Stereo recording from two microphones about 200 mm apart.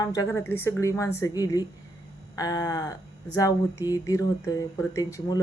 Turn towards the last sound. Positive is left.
turn(degrees=20)  # may be behind; listen again after turning